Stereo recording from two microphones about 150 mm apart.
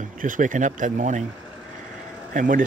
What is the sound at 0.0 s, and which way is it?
Speech, 60° right (ahead or behind).